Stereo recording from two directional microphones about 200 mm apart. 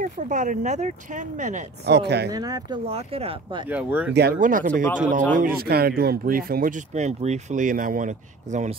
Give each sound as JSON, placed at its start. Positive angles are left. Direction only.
{"t": 0.0, "sound": "speech", "side_deg": -40}
{"t": 1.9, "sound": "speech", "side_deg": -55}
{"t": 2.3, "sound": "speech", "side_deg": -20}
{"t": 2.9, "sound": "speech", "side_deg": -30}
{"t": 3.6, "sound": "speech", "side_deg": -5}
{"t": 4.1, "sound": "speech", "side_deg": -50}